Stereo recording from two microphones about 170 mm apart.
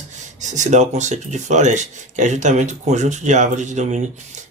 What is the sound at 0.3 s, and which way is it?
Speech, 45° right (ahead or behind).